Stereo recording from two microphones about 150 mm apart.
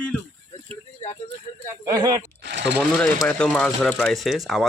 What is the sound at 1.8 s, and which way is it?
Speech, 25° right (ahead or behind).